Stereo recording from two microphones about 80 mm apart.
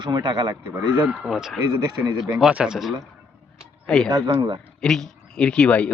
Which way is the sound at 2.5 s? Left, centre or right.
Centre.